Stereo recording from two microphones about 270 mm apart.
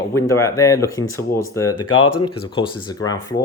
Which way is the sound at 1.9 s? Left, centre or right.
Left.